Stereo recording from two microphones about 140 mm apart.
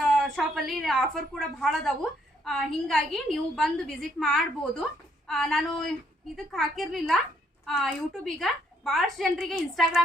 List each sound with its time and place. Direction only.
0.0 s a woman's voice: centre (ahead or behind)